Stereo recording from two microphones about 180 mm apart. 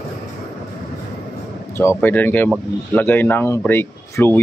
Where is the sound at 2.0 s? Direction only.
10° left (ahead or behind).